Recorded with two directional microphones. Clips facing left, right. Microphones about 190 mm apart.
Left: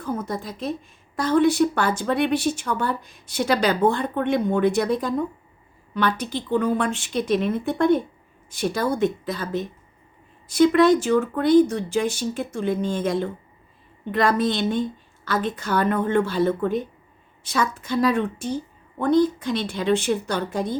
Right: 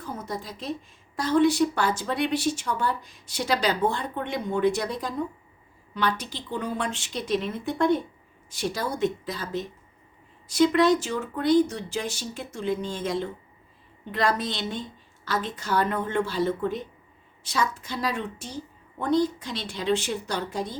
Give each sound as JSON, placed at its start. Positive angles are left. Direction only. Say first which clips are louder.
{"t": 0.0, "sound": "a woman's voice", "louder": "left 6 dB", "side_deg": 55}